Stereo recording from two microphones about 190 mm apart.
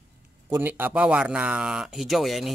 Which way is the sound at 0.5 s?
10° right (ahead or behind).